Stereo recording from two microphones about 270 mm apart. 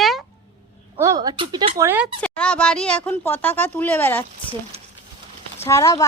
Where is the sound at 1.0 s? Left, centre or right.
Centre.